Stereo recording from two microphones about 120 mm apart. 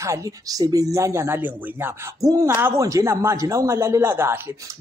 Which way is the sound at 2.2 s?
30° right (ahead or behind).